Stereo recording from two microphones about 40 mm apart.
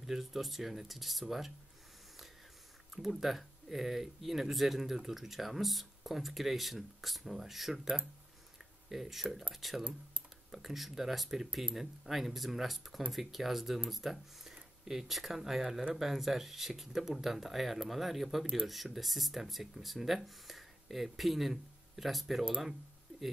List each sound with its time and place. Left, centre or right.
0.0 s speech: centre
2.9 s speech: centre
7.8 s speech: centre
8.8 s speech: centre
14.5 s a sound: centre
15.1 s speech: centre